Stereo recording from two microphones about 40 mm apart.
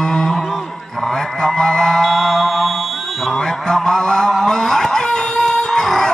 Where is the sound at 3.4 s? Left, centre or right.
Centre.